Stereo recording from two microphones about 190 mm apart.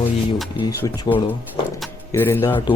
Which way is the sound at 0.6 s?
20° left (ahead or behind).